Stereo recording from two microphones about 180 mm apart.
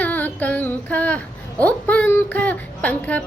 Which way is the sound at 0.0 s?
10° left (ahead or behind).